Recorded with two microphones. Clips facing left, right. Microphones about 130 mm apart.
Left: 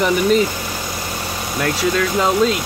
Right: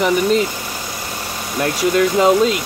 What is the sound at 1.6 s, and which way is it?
Speech, 20° right (ahead or behind).